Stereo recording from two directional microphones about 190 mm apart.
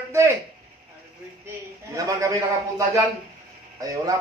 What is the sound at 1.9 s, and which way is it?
Speech, 15° right (ahead or behind).